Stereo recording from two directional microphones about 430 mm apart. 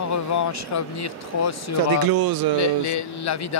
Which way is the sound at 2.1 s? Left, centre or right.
Right.